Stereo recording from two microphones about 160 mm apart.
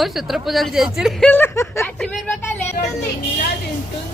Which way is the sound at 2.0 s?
5° left (ahead or behind).